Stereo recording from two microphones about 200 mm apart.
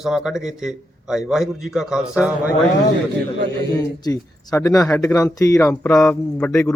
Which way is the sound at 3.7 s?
15° left (ahead or behind).